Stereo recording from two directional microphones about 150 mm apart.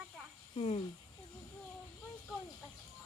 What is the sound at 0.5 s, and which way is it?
Speech, 40° left (ahead or behind).